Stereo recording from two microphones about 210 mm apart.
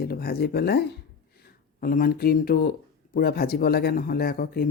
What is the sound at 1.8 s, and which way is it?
Speech, 45° left (ahead or behind).